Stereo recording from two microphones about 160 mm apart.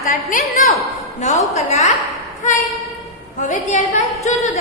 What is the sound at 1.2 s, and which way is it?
A woman's voice, 45° left (ahead or behind).